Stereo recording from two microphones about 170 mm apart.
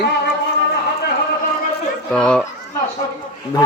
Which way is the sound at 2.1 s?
5° left (ahead or behind).